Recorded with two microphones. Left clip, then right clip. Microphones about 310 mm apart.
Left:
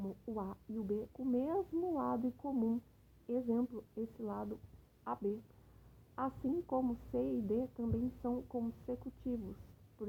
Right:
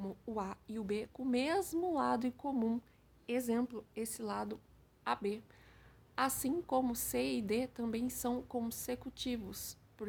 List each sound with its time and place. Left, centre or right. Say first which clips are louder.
0.0 s a woman's voice: right 2 dB; right
1.3 s a woman's voice: right 2 dB; centre
6.2 s a woman's voice: right 1 dB; right
9.2 s a woman's voice: right 2 dB; right